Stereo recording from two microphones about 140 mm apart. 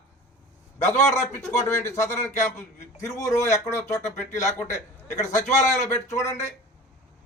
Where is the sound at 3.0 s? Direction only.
20° left (ahead or behind).